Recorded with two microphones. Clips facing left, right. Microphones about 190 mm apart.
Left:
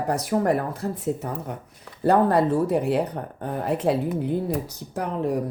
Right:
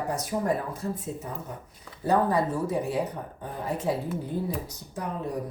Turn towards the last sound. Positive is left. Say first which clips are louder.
# left 7 dB
turn(degrees=75)  # may be behind; listen again after turning